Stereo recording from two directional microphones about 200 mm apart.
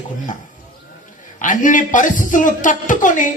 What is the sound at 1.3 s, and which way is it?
A man's voice, 40° left (ahead or behind).